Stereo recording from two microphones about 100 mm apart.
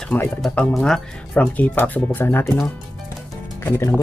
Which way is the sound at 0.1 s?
20° left (ahead or behind).